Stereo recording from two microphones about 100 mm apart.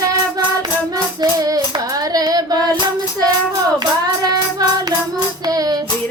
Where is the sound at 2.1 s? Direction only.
40° right (ahead or behind).